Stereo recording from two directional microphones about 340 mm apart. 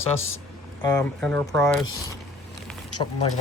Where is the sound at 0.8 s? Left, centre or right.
Centre.